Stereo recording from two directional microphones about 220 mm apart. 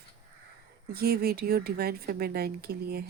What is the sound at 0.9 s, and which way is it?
A woman's voice, 45° right (ahead or behind).